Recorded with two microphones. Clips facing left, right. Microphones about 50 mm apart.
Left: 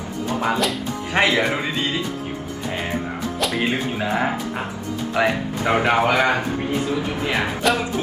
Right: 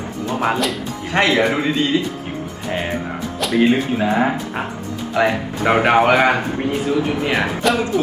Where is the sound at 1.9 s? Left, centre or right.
Left.